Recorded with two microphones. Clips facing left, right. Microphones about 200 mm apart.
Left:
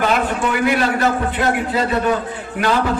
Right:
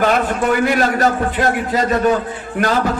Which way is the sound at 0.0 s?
45° right (ahead or behind).